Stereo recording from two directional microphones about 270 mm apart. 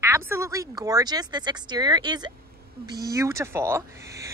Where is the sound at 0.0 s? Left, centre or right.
Centre.